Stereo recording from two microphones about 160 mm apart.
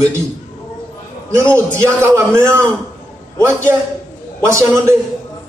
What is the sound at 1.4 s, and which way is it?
A man's voice, 15° right (ahead or behind).